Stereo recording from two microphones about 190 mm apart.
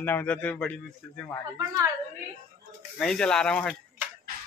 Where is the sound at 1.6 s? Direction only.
20° right (ahead or behind).